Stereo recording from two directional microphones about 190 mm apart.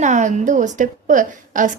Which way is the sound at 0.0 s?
40° right (ahead or behind).